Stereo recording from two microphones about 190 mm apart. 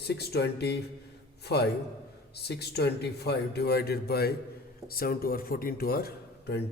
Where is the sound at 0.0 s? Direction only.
60° left (ahead or behind).